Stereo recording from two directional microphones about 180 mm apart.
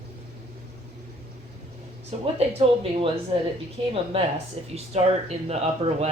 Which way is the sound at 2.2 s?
35° right (ahead or behind).